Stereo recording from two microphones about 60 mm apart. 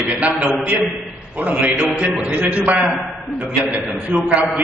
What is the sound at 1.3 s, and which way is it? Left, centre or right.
A man's voice, right.